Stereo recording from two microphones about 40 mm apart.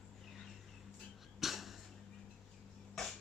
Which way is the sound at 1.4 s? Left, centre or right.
Centre.